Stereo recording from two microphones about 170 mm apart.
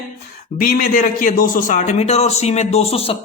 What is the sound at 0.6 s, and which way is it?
Speech, 55° left (ahead or behind).